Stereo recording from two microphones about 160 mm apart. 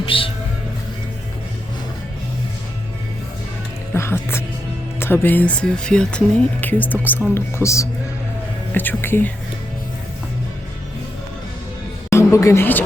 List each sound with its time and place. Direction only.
0.0 s music: 35° left (ahead or behind)
3.9 s music: 15° left (ahead or behind)
4.9 s speech: 15° left (ahead or behind)
12.1 s a woman's voice: 20° left (ahead or behind)